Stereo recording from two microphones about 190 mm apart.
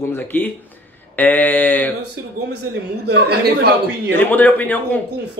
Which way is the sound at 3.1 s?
60° right (ahead or behind).